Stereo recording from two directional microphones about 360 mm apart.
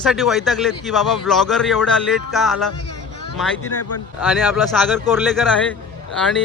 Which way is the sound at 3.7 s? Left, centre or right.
Left.